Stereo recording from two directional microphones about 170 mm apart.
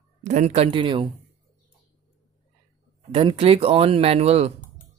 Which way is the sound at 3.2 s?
35° right (ahead or behind).